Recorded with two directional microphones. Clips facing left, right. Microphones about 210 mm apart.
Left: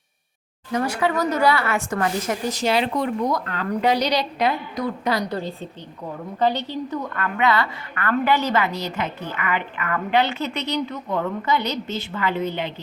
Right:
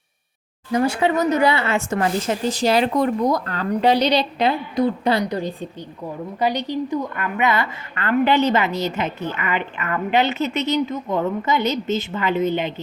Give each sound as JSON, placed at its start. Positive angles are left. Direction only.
{"t": 0.7, "sound": "a woman's voice", "side_deg": -25}
{"t": 5.2, "sound": "a woman's voice", "side_deg": -15}